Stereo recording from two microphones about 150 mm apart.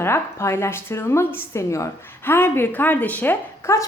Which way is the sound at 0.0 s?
15° left (ahead or behind).